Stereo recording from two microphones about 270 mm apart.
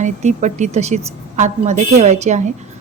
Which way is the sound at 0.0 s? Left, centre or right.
Right.